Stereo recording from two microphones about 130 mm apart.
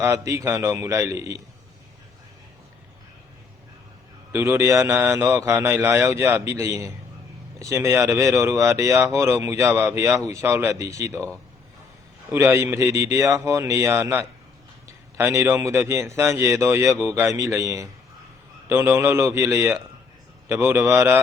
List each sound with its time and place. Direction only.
0.0 s speech: 20° right (ahead or behind)
4.3 s speech: 20° right (ahead or behind)
12.3 s a man's voice: 15° right (ahead or behind)